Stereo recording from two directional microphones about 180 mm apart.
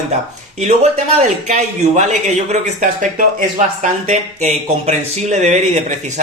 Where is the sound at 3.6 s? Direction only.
45° right (ahead or behind).